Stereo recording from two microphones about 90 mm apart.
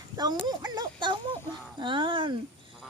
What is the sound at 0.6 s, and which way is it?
Speech, 55° right (ahead or behind).